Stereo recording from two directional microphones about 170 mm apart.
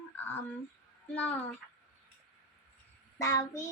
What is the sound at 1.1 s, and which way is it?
Speech, 10° left (ahead or behind).